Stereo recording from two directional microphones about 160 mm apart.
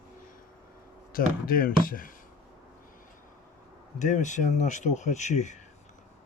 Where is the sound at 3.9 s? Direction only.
50° left (ahead or behind).